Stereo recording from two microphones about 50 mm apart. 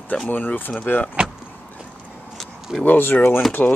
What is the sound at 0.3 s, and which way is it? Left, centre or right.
Speech, left.